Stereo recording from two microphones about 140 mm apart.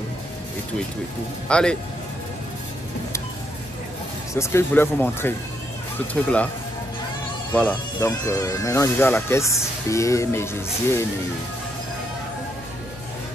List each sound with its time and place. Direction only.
1.5 s speech: 5° left (ahead or behind)
4.3 s speech: 20° left (ahead or behind)
7.5 s speech: 15° left (ahead or behind)